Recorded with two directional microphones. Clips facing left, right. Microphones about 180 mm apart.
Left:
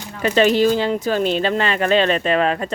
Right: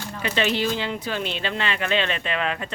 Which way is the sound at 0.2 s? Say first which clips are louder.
Left 9 dB; 45° left (ahead or behind).